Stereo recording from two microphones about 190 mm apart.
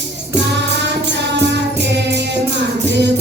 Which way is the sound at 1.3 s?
65° right (ahead or behind).